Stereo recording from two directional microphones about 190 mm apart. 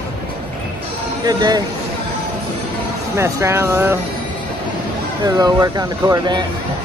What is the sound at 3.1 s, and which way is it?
Speech, 15° right (ahead or behind).